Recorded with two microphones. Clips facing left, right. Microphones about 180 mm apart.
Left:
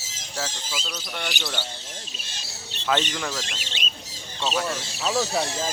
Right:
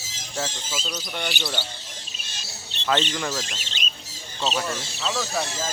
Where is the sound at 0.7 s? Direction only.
20° right (ahead or behind).